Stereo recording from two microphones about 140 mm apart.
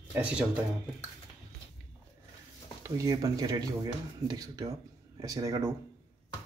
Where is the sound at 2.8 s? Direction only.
25° right (ahead or behind).